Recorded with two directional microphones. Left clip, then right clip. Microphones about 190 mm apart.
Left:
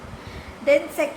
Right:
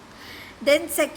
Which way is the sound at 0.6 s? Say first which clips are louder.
Left 1 dB; 40° right (ahead or behind).